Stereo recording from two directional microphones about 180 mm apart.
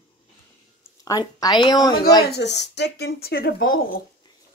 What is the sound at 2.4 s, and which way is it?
Speech, 70° left (ahead or behind).